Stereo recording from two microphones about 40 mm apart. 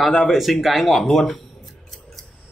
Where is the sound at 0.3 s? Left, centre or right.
Centre.